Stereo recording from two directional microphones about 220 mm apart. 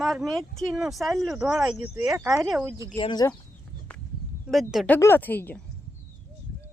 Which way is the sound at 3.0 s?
20° left (ahead or behind).